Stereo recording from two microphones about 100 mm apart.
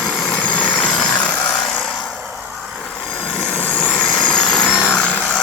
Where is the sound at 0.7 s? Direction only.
10° left (ahead or behind).